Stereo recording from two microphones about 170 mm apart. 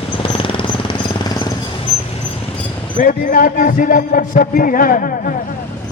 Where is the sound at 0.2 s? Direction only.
30° left (ahead or behind).